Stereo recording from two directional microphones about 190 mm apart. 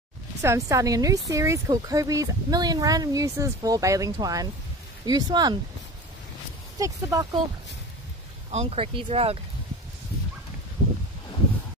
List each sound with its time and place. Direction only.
0.4 s a woman's voice: 15° right (ahead or behind)
6.8 s a woman's voice: 20° right (ahead or behind)
8.5 s speech: 35° right (ahead or behind)